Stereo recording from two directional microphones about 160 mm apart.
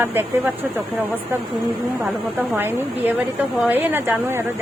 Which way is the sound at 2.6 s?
15° right (ahead or behind).